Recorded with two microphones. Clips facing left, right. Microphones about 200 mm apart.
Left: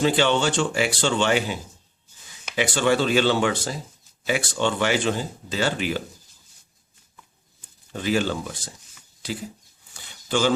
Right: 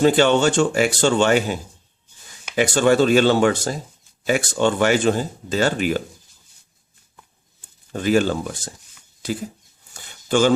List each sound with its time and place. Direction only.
0.0 s speech: 45° right (ahead or behind)
2.6 s speech: 45° right (ahead or behind)
7.9 s speech: 50° right (ahead or behind)
9.9 s a sound: 50° right (ahead or behind)